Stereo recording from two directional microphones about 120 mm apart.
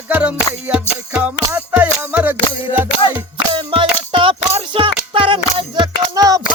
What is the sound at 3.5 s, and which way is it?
Music, 45° right (ahead or behind).